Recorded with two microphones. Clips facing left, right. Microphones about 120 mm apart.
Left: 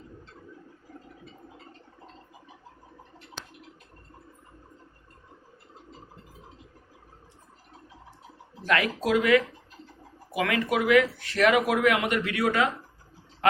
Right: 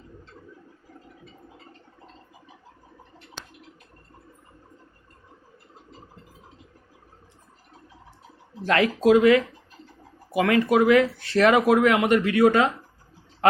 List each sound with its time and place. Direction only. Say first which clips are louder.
8.6 s speech: right 6 dB; 30° right (ahead or behind)